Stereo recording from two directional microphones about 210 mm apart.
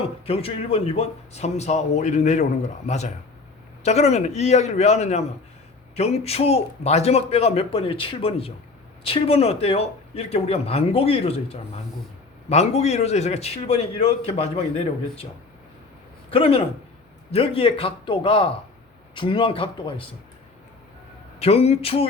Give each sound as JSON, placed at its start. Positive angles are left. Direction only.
{"t": 0.0, "sound": "speech", "side_deg": 30}
{"t": 16.3, "sound": "speech", "side_deg": 25}
{"t": 21.3, "sound": "speech", "side_deg": 30}